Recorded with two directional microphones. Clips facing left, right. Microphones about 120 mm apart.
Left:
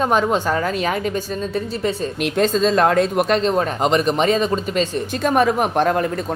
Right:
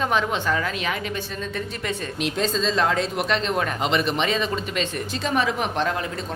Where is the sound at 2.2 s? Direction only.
55° left (ahead or behind).